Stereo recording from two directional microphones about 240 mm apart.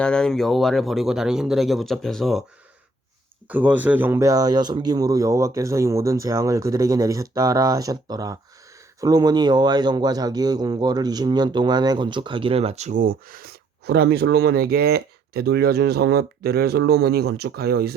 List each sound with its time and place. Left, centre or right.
0.0 s speech: centre
3.5 s speech: centre; by 17.9 s right